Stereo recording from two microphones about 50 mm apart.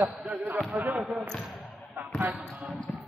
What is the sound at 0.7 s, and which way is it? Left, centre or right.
Speech, right.